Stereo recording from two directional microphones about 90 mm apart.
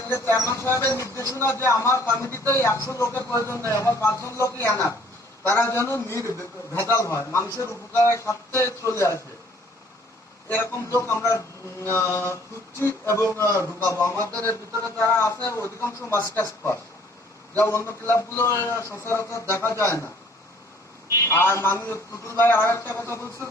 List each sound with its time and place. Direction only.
0.1 s a man's voice: 30° left (ahead or behind)
10.5 s a man's voice: 30° left (ahead or behind)
21.2 s a man's voice: 25° left (ahead or behind)